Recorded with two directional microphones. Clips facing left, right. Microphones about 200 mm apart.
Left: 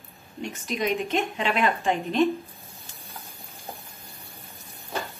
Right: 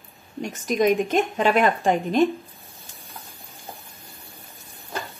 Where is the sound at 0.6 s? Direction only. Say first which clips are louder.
Right 7 dB; 45° right (ahead or behind).